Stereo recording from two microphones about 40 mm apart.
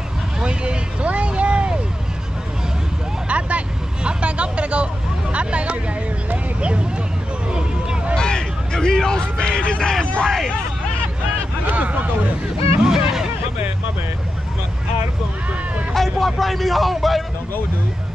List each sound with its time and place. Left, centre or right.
0.4 s vehicle: right
3.3 s vehicle: right
5.3 s speech: right
6.3 s vehicle: right
8.2 s a sound: centre
10.2 s speech: centre
11.6 s vehicle: right
12.8 s a sound: centre
15.9 s speech: centre